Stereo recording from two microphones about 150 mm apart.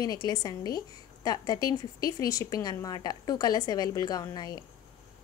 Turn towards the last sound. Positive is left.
turn(degrees=25)  # may be behind; listen again after turning